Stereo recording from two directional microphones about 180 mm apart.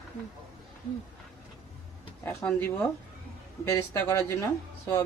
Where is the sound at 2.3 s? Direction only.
10° left (ahead or behind).